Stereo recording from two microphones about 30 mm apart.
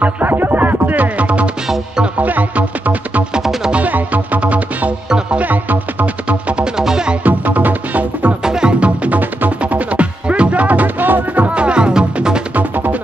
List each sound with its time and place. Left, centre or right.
0.0 s music: right
1.0 s music: right
2.1 s music: right
4.4 s music: right
5.4 s music: right
7.2 s music: right
8.5 s music: right
8.7 s music: right
10.2 s music: right
11.5 s music: right
12.5 s music: right